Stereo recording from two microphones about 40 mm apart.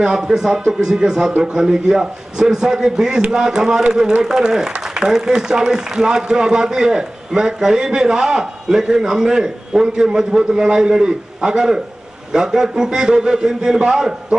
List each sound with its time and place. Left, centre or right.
0.0 s a man's voice: centre